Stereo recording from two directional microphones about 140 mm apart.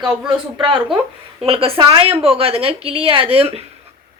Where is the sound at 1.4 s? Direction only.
40° right (ahead or behind).